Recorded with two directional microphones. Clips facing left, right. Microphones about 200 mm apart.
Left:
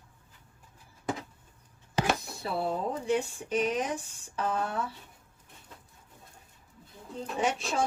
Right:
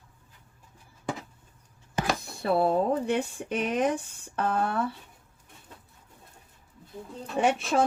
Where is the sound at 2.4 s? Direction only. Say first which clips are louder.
Right 8 dB; 60° right (ahead or behind).